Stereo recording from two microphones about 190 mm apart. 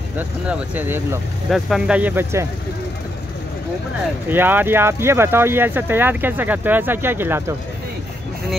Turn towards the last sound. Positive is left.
turn(degrees=-10)  # may be behind; listen again after turning